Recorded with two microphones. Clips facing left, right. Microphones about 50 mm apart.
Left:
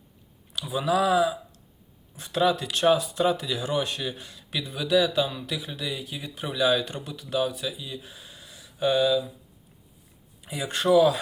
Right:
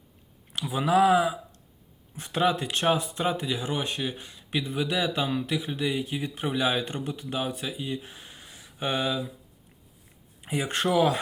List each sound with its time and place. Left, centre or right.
0.7 s speech: right
10.4 s speech: right